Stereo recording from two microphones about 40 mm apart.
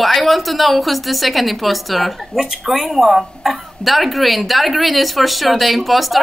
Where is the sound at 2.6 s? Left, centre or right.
Centre.